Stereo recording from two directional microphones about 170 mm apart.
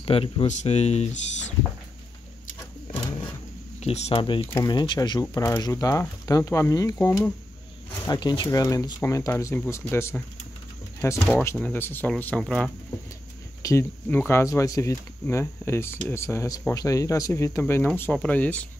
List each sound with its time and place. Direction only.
0.0 s speech: 35° left (ahead or behind)
3.8 s speech: 35° left (ahead or behind); by 7.3 s 15° left (ahead or behind)
8.0 s speech: 25° left (ahead or behind); by 12.7 s 5° left (ahead or behind)
13.6 s speech: 15° left (ahead or behind)